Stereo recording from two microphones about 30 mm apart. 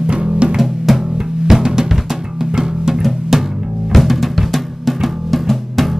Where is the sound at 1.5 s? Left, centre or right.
Centre.